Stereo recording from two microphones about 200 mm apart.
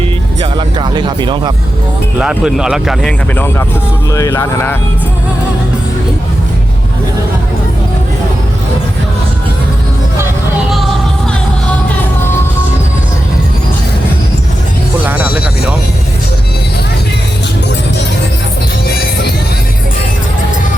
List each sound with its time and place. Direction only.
0.5 s music: 25° right (ahead or behind)
2.1 s speech: 5° right (ahead or behind); by 4.8 s 10° left (ahead or behind)
15.0 s music: 10° right (ahead or behind)